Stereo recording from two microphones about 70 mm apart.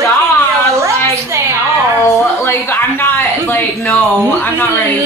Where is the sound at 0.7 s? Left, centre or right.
Right.